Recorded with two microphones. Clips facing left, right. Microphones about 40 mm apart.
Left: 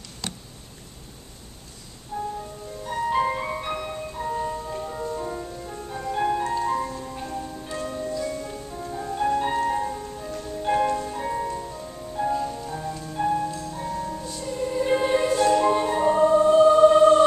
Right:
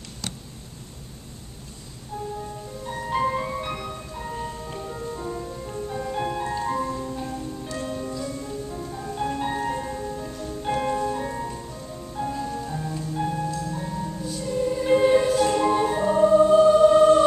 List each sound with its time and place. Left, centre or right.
2.1 s music: left
2.9 s music: centre
4.7 s music: centre
8.2 s music: centre
9.8 s music: centre
11.1 s music: centre